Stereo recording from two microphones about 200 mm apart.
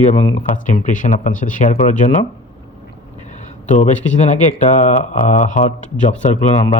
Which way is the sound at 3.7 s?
35° left (ahead or behind).